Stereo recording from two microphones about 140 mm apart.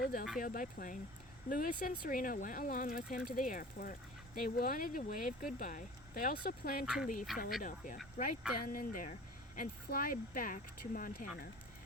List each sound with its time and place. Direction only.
0.0 s a sound: 90° left
0.3 s speech: 75° left (ahead or behind)
1.5 s speech: 90° left
6.8 s speech: 5° right (ahead or behind)
8.2 s speech: 65° left (ahead or behind)
8.5 s speech: 90° left
9.6 s speech: 90° left